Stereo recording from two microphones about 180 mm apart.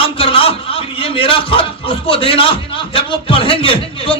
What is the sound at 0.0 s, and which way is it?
A man's voice, 30° left (ahead or behind).